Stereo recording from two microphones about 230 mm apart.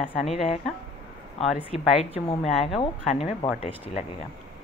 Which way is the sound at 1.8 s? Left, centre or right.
Centre.